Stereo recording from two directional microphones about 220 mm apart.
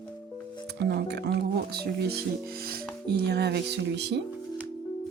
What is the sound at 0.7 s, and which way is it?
Speech, 50° right (ahead or behind).